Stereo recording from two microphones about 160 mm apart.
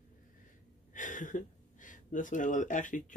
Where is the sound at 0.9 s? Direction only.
55° left (ahead or behind).